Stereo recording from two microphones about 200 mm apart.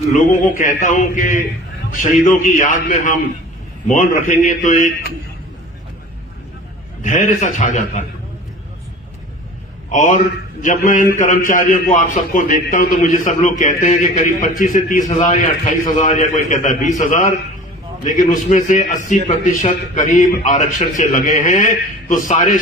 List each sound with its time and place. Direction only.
0.1 s a man's voice: 40° left (ahead or behind)
7.0 s a man's voice: 35° left (ahead or behind)
9.9 s a man's voice: 40° left (ahead or behind)